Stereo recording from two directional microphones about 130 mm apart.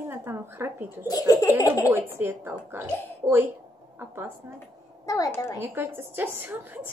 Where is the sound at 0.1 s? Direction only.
15° right (ahead or behind).